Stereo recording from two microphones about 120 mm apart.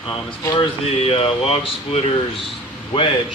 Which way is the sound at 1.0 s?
55° left (ahead or behind).